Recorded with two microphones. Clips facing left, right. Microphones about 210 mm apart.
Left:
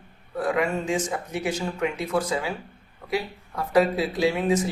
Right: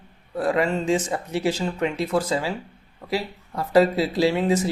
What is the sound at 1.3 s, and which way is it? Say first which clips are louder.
Speech: right 5 dB; 30° right (ahead or behind).